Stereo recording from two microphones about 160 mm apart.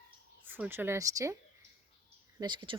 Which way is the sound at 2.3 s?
30° right (ahead or behind).